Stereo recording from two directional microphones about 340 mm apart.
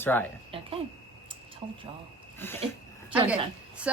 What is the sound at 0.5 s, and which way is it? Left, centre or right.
Speech, centre.